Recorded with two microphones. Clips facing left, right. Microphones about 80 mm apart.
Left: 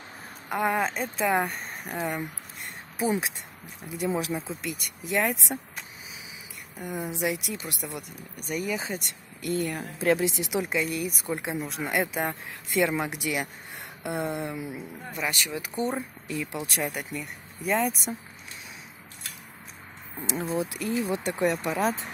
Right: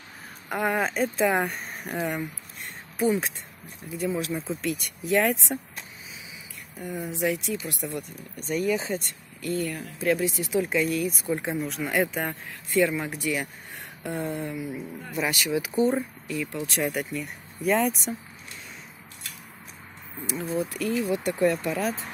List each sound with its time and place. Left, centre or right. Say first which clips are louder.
0.5 s speech: even; centre
3.8 s speech: even; left
4.5 s speech: right 5 dB; centre
6.8 s speech: right 1 dB; centre
9.6 s speech: even; left
10.6 s speech: right 4 dB; centre
12.8 s speech: right 1 dB; centre
14.1 s speech: left 1 dB; left
14.5 s speech: right 2 dB; left
15.1 s speech: right 5 dB; centre
16.3 s speech: left 2 dB; left
16.6 s speech: right 4 dB; centre
20.4 s speech: right 3 dB; left